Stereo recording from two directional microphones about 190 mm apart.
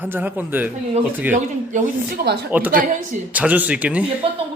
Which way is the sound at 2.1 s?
60° right (ahead or behind).